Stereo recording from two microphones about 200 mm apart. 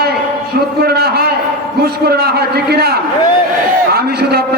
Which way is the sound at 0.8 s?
50° right (ahead or behind).